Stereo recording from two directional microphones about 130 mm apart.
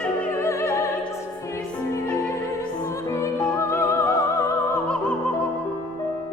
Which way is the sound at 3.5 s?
20° left (ahead or behind).